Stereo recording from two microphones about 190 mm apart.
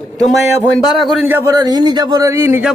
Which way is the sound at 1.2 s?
15° right (ahead or behind).